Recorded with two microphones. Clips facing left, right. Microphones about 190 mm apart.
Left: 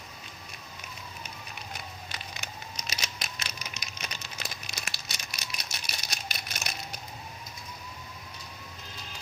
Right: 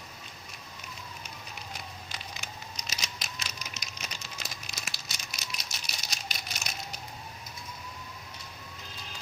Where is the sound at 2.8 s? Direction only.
60° left (ahead or behind).